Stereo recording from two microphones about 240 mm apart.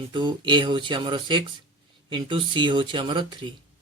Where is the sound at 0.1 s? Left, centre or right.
Centre.